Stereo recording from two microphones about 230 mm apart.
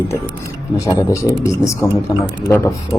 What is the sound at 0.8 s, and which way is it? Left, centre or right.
Speech, centre.